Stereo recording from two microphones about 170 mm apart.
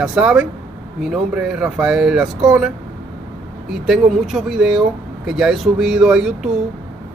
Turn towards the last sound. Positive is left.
turn(degrees=-5)  # may be behind; listen again after turning